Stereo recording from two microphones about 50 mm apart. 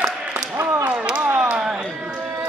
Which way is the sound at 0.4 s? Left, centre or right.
Right.